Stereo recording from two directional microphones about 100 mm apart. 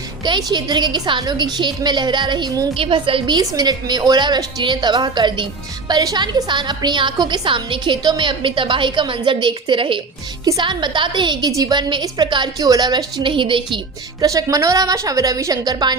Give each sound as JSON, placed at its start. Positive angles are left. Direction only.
{"t": 0.3, "sound": "a woman's voice", "side_deg": -45}
{"t": 2.7, "sound": "a woman's voice", "side_deg": -65}
{"t": 10.4, "sound": "a woman's voice", "side_deg": -45}
{"t": 14.2, "sound": "a woman's voice", "side_deg": -35}